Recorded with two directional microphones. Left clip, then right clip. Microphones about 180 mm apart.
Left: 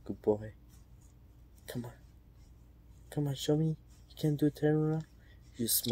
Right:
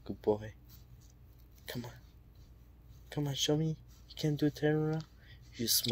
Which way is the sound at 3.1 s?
20° left (ahead or behind).